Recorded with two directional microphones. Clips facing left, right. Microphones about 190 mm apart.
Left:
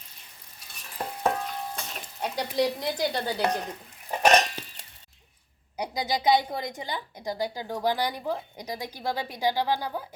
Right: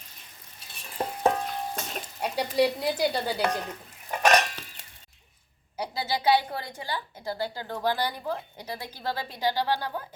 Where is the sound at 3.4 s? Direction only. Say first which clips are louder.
Left 1 dB; 20° left (ahead or behind).